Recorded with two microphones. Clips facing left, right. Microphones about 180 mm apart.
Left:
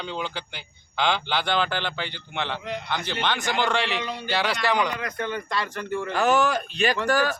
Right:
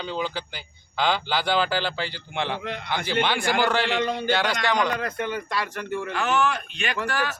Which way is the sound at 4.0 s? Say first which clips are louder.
Right 6 dB; 50° right (ahead or behind).